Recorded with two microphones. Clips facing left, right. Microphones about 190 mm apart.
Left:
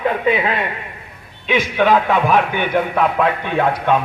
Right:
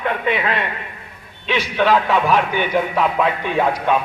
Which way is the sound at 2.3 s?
55° left (ahead or behind).